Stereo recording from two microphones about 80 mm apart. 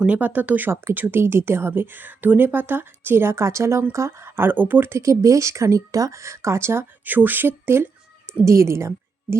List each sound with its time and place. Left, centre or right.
0.0 s speech: centre; by 8.9 s right